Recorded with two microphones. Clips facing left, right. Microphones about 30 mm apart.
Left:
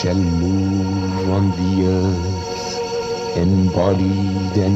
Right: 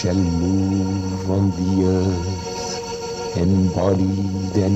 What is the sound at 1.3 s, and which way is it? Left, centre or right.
Music, left.